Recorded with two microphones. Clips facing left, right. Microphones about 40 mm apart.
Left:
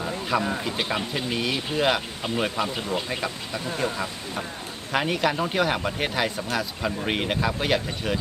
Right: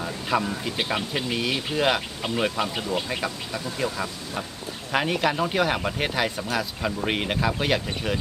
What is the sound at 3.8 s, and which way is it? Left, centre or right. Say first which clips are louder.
Speech: even; left.